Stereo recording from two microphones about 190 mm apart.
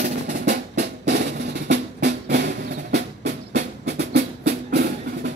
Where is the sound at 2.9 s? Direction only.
65° right (ahead or behind).